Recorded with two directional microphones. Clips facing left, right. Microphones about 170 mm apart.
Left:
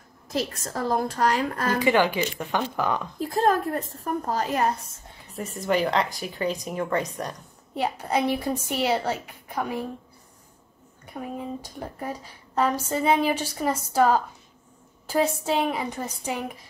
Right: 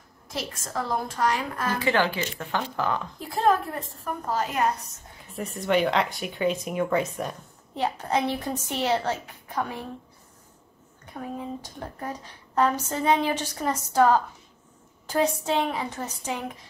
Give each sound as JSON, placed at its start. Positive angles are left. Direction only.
{"t": 0.4, "sound": "a woman's voice", "side_deg": 40}
{"t": 1.8, "sound": "a woman's voice", "side_deg": 15}
{"t": 3.2, "sound": "a woman's voice", "side_deg": 40}
{"t": 5.3, "sound": "speech", "side_deg": 0}
{"t": 7.7, "sound": "a woman's voice", "side_deg": 10}
{"t": 11.1, "sound": "a woman's voice", "side_deg": 10}